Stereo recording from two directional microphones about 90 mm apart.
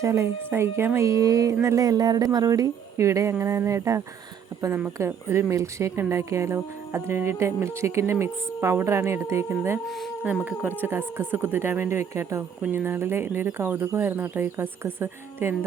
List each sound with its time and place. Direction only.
0.0 s speech: 30° right (ahead or behind)